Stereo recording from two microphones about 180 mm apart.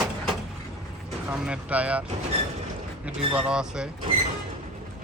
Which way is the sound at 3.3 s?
5° right (ahead or behind).